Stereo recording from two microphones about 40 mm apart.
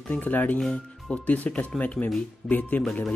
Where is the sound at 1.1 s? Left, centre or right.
Left.